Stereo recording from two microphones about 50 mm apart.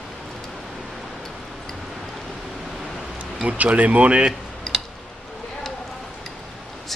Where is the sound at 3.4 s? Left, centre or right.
Right.